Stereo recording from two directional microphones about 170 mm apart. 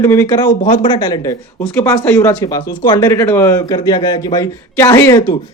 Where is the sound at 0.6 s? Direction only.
45° left (ahead or behind).